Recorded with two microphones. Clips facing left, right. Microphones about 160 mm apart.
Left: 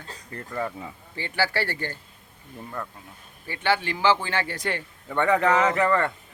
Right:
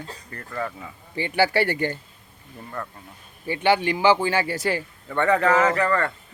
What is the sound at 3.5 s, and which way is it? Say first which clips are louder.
Speech: right 5 dB; 15° right (ahead or behind).